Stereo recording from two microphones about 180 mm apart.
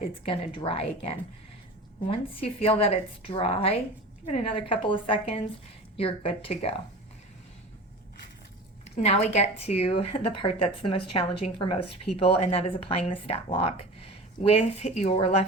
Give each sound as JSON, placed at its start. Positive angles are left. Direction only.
{"t": 0.3, "sound": "speech", "side_deg": 30}
{"t": 9.0, "sound": "speech", "side_deg": 35}